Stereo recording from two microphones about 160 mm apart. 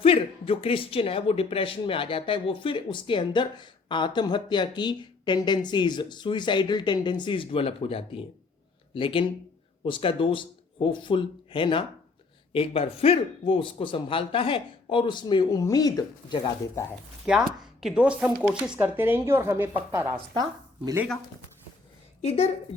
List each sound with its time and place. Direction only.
0.0 s speech: 35° left (ahead or behind)
17.2 s a woman's voice: 5° right (ahead or behind); by 21.0 s 20° right (ahead or behind)
22.2 s speech: 40° left (ahead or behind)